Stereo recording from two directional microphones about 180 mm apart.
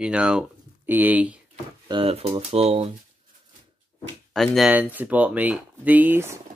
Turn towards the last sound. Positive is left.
turn(degrees=-10)  # may be behind; listen again after turning